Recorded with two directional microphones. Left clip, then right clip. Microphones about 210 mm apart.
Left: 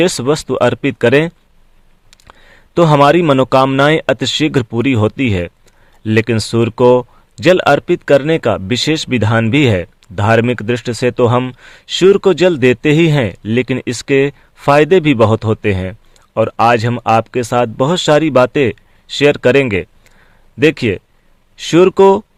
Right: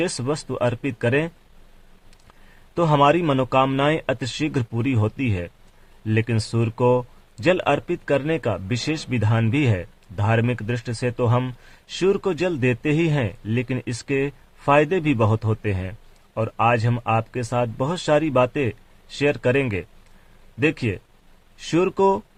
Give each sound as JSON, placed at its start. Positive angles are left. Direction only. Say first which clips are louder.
{"t": 0.0, "sound": "speech", "louder": "left 11 dB", "side_deg": 35}
{"t": 2.7, "sound": "speech", "louder": "left 9 dB", "side_deg": 35}